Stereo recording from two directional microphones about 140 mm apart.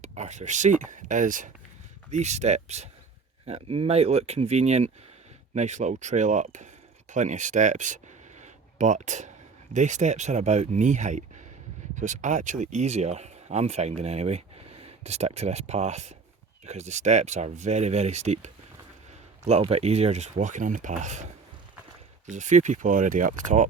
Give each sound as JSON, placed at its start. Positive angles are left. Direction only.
{"t": 0.0, "sound": "speech", "side_deg": -55}
{"t": 2.0, "sound": "speech", "side_deg": -55}
{"t": 22.3, "sound": "speech", "side_deg": -60}